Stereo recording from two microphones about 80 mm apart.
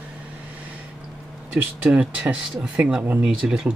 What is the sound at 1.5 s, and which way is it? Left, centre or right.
Speech, centre.